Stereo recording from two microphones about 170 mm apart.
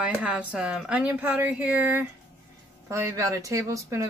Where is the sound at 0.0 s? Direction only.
10° right (ahead or behind).